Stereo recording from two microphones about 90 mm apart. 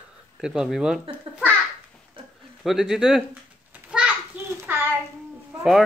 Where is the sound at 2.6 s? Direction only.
5° right (ahead or behind).